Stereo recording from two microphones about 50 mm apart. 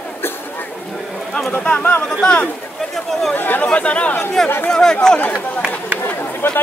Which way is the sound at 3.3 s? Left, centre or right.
Left.